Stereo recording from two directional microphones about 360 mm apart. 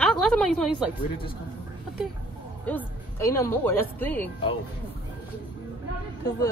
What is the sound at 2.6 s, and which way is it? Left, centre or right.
A woman's voice, centre.